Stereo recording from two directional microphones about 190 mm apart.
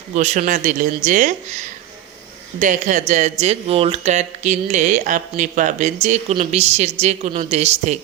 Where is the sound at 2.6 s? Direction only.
40° right (ahead or behind).